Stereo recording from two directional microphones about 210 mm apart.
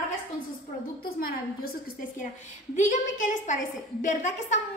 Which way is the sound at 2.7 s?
35° left (ahead or behind).